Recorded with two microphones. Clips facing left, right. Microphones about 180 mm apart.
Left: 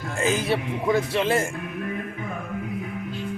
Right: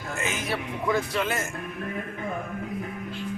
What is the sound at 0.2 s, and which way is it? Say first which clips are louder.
Speech: left 8 dB; 35° left (ahead or behind).